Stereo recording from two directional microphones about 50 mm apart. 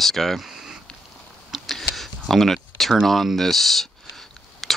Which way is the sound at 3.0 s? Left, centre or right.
Centre.